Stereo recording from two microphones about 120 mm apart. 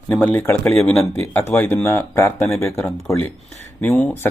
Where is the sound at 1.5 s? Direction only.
15° left (ahead or behind).